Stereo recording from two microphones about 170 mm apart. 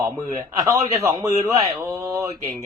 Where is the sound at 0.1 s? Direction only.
20° right (ahead or behind).